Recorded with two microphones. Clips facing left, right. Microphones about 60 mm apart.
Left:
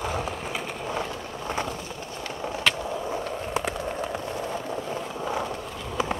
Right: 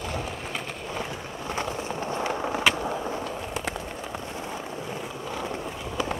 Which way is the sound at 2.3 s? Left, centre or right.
Right.